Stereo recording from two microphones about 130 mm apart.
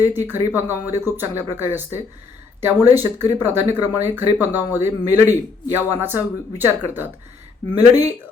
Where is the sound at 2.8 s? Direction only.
15° right (ahead or behind).